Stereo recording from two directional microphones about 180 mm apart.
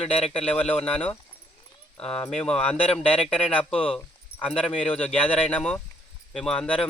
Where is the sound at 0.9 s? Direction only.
5° left (ahead or behind).